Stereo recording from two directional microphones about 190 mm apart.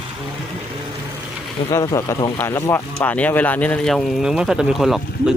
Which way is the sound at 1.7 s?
15° left (ahead or behind).